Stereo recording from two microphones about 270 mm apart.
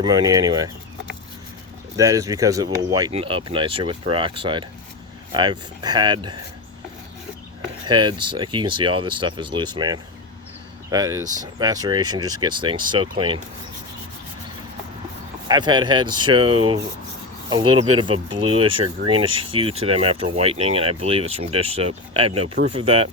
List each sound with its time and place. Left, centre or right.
0.0 s speech: centre
2.0 s speech: centre
7.9 s speech: centre
15.4 s speech: centre